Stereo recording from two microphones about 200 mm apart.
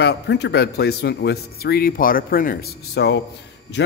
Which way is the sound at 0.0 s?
60° left (ahead or behind).